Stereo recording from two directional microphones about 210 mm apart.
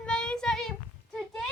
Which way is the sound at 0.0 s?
5° left (ahead or behind).